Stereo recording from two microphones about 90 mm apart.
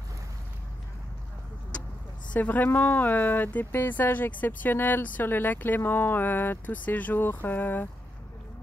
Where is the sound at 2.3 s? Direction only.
20° left (ahead or behind).